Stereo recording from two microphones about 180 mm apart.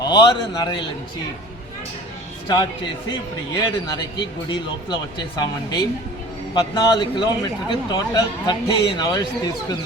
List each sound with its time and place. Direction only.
0.0 s a man's voice: 25° left (ahead or behind)
2.5 s a man's voice: 25° left (ahead or behind)